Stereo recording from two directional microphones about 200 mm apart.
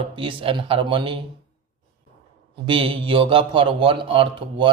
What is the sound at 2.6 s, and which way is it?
Speech, 25° right (ahead or behind).